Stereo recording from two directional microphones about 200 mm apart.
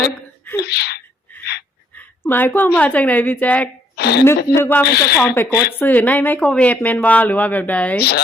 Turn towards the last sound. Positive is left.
turn(degrees=10)  # may be behind; listen again after turning